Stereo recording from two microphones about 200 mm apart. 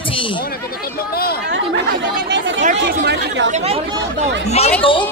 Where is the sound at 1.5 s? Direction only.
65° right (ahead or behind).